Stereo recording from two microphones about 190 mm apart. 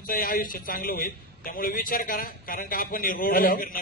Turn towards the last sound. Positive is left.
turn(degrees=50)  # may be behind; listen again after turning